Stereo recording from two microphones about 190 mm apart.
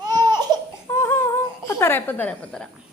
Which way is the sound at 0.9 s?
15° left (ahead or behind).